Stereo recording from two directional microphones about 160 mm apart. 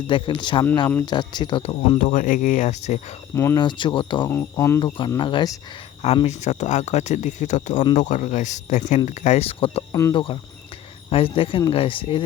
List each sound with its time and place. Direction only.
0.1 s speech: 30° left (ahead or behind)
2.0 s speech: 55° left (ahead or behind)
3.3 s speech: 15° left (ahead or behind)
3.6 s speech: 30° left (ahead or behind)
4.3 s speech: 15° left (ahead or behind)
4.9 s speech: 30° left (ahead or behind)
6.2 s speech: 45° left (ahead or behind)
9.9 s speech: 20° left (ahead or behind)